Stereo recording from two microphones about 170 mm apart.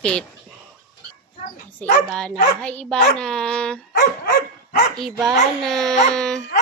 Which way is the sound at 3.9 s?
60° left (ahead or behind).